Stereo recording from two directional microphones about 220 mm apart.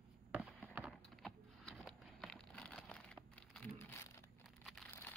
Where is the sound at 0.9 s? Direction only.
Centre (ahead or behind).